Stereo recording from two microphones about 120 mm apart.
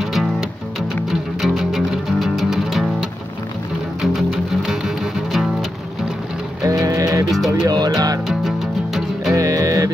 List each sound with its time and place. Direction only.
0.0 s music: centre (ahead or behind)
6.6 s music: 30° right (ahead or behind)
8.3 s music: centre (ahead or behind)
9.3 s music: 30° right (ahead or behind)